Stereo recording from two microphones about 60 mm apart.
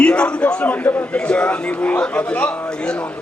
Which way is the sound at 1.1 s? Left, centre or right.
Centre.